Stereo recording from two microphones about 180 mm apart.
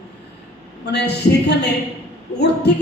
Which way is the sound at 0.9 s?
70° left (ahead or behind).